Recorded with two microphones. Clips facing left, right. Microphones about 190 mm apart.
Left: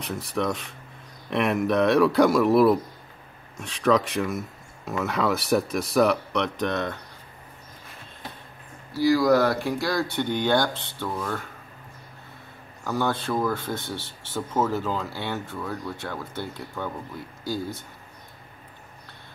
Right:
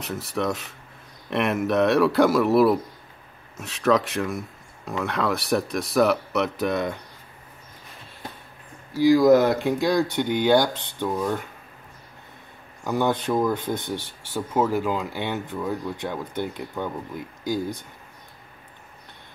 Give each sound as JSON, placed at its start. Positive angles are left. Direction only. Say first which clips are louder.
{"t": 0.0, "sound": "speech", "louder": "right 1 dB", "side_deg": 0}
{"t": 8.9, "sound": "speech", "louder": "right 4 dB", "side_deg": -20}
{"t": 12.8, "sound": "speech", "louder": "right 3 dB", "side_deg": -15}